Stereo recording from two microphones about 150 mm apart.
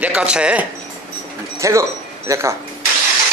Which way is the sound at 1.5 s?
20° right (ahead or behind).